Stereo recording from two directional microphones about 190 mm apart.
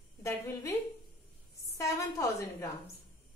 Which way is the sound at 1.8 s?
15° left (ahead or behind).